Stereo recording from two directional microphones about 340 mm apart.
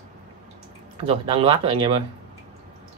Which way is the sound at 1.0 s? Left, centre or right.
Centre.